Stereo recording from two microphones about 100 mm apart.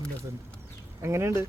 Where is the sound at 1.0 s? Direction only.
25° right (ahead or behind).